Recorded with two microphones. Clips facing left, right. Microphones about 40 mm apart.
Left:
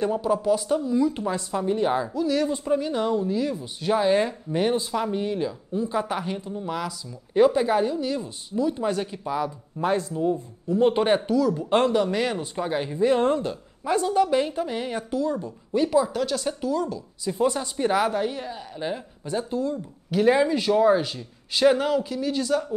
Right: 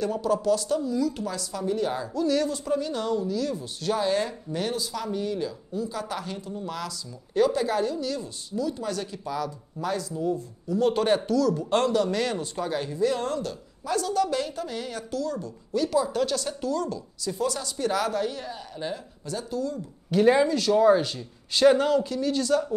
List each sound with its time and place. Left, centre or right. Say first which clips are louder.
0.0 s speech: left 2 dB; left
2.1 s speech: even; centre
2.4 s speech: left 3 dB; left
16.1 s speech: left 1 dB; centre; by 19.8 s left
20.1 s speech: even; centre
20.4 s speech: left 1 dB; centre
20.8 s speech: even; centre